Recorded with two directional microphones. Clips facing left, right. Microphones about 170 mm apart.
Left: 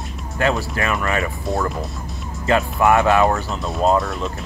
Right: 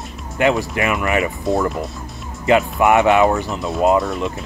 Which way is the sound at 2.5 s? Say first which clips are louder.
Right 2 dB; 20° right (ahead or behind).